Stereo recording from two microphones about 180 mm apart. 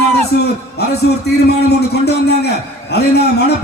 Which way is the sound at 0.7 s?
65° left (ahead or behind).